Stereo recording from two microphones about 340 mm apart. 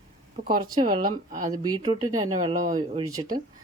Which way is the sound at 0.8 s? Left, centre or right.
Centre.